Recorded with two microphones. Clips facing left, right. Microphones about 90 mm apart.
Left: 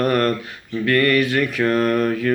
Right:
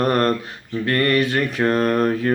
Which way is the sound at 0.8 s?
30° right (ahead or behind).